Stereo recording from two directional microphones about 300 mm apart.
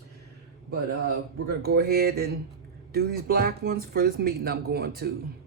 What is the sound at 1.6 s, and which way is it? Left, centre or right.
Speech, right.